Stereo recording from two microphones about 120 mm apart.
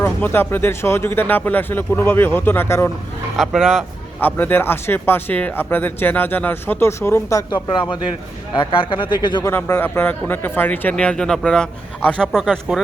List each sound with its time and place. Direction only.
0.0 s speech: 20° left (ahead or behind)
3.3 s speech: 5° right (ahead or behind)
4.2 s speech: 15° left (ahead or behind)
7.5 s speech: 40° left (ahead or behind)
9.4 s speech: 20° left (ahead or behind); by 12.5 s 5° left (ahead or behind)